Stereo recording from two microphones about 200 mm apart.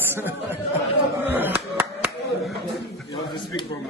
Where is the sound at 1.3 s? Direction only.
10° right (ahead or behind).